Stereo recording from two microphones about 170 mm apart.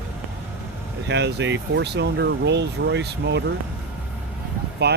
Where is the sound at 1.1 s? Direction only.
90° right.